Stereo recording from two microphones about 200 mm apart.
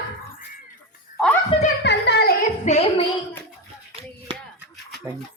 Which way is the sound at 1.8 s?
60° left (ahead or behind).